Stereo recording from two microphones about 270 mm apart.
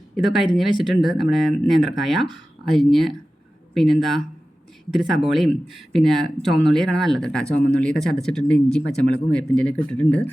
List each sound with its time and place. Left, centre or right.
0.2 s speech: centre